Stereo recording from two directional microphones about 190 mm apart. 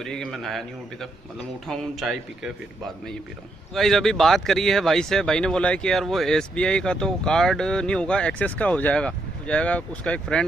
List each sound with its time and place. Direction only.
0.0 s speech: centre (ahead or behind)
1.7 s speech: centre (ahead or behind)
3.7 s speech: centre (ahead or behind)